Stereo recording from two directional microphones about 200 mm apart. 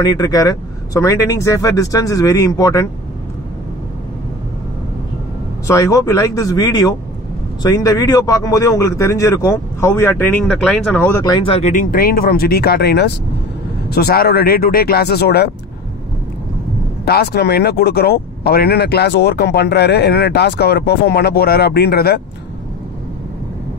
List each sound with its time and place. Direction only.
0.0 s speech: 20° left (ahead or behind)
5.7 s speech: 15° left (ahead or behind); by 15.5 s 55° left (ahead or behind)
17.0 s speech: 55° left (ahead or behind)